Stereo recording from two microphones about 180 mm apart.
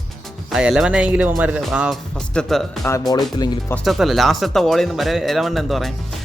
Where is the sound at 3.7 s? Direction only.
Centre (ahead or behind).